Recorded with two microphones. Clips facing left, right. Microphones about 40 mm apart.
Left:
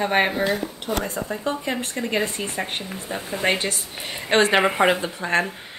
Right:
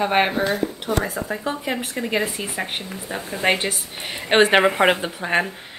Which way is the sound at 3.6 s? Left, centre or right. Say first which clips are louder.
Right 1 dB; centre.